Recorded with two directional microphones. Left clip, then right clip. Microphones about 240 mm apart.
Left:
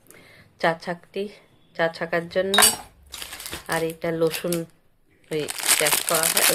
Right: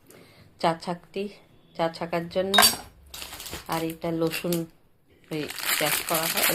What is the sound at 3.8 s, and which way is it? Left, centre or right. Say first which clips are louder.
Speech: left 5 dB; left.